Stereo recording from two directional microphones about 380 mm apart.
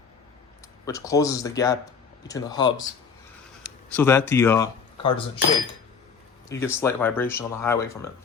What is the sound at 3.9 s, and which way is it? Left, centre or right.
Speech, centre.